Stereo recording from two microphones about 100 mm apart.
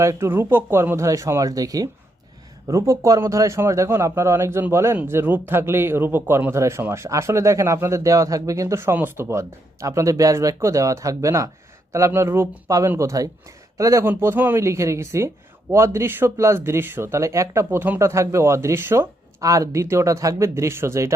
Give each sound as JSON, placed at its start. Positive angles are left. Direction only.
{"t": 0.0, "sound": "a man's voice", "side_deg": -30}